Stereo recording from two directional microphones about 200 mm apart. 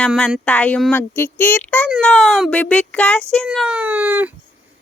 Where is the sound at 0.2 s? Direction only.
Centre (ahead or behind).